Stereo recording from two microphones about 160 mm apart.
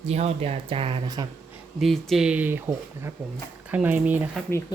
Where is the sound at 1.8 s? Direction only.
Centre (ahead or behind).